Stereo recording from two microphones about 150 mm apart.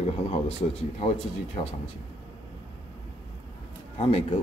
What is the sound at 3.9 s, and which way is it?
Speech, 40° left (ahead or behind).